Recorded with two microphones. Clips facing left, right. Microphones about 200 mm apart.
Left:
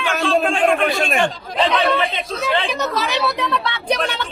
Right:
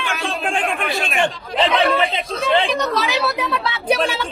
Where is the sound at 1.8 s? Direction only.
Centre (ahead or behind).